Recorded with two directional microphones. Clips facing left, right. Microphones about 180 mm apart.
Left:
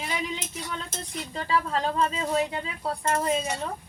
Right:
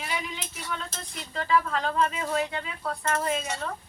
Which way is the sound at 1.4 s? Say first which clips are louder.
Right 1 dB; 30° left (ahead or behind).